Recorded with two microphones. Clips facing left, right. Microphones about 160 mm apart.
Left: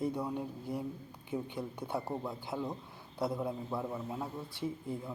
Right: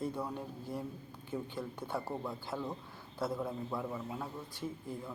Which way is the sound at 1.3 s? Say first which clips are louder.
Left 2 dB; 15° left (ahead or behind).